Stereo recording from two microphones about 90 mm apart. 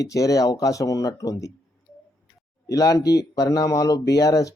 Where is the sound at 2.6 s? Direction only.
40° left (ahead or behind).